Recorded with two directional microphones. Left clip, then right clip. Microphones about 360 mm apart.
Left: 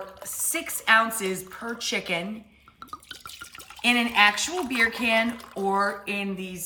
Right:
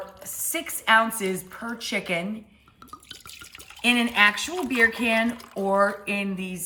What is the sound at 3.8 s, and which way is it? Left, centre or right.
Speech, centre.